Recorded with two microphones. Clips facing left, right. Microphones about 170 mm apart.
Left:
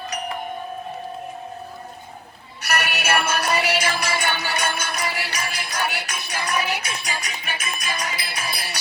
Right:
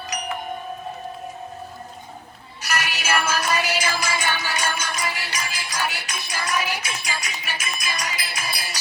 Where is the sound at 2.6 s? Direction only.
60° left (ahead or behind).